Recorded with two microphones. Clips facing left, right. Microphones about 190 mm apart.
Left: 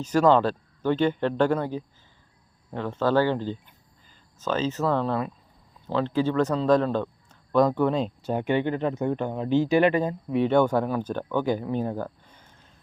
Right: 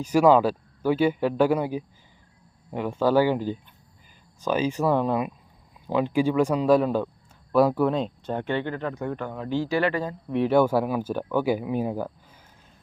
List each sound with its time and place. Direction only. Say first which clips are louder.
0.0 s speech: right 2 dB; 10° right (ahead or behind); by 10.2 s 20° left (ahead or behind)
10.2 s speech: right 2 dB; centre (ahead or behind)